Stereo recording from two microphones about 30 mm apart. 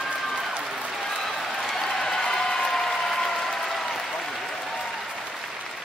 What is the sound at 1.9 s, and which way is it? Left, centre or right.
Applause, centre.